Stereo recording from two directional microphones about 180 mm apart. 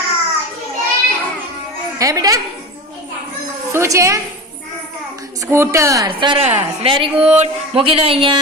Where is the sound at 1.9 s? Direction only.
20° right (ahead or behind).